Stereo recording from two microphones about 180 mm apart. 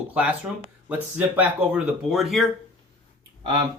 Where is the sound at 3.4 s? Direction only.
25° right (ahead or behind).